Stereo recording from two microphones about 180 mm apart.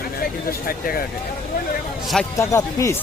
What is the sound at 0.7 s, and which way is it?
Speech, 55° left (ahead or behind).